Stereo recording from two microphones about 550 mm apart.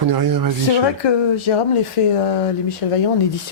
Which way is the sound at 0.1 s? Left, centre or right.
Right.